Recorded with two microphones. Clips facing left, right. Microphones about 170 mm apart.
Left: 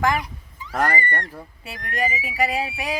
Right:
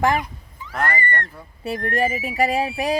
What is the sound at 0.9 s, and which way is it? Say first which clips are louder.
Speech: even; 15° left (ahead or behind).